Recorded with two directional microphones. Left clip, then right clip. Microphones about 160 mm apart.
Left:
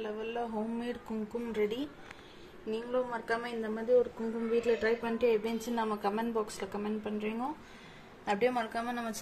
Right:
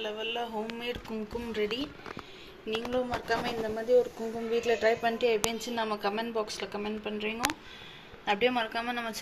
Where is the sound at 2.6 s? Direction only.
Centre (ahead or behind).